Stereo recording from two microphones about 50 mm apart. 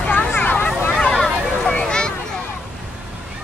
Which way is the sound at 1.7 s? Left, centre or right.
Centre.